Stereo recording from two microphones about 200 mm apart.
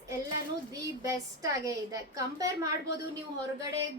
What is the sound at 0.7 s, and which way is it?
A woman's voice, 15° right (ahead or behind).